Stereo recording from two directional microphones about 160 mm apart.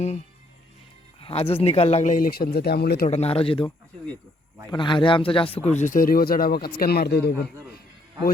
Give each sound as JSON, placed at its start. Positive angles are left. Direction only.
{"t": 1.2, "sound": "speech", "side_deg": 35}
{"t": 3.1, "sound": "speech", "side_deg": 40}
{"t": 4.7, "sound": "speech", "side_deg": 30}
{"t": 5.8, "sound": "a man's voice", "side_deg": 60}